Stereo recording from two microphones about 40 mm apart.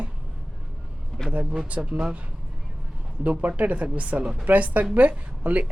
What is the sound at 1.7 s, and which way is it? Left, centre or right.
Speech, right.